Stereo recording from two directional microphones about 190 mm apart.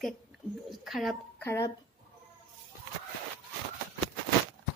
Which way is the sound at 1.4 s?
15° left (ahead or behind).